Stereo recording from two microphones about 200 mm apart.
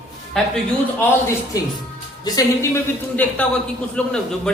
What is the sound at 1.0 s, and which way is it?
A man's voice, 15° left (ahead or behind).